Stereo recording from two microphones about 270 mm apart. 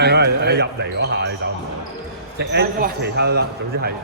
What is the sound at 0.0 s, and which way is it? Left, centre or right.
Speech, right.